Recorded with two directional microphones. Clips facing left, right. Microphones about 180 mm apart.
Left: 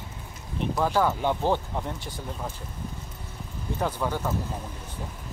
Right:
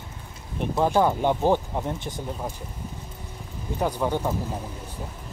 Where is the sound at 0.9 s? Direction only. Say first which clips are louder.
Right 4 dB; 15° right (ahead or behind).